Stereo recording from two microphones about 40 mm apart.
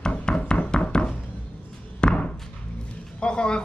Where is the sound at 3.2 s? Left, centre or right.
Left.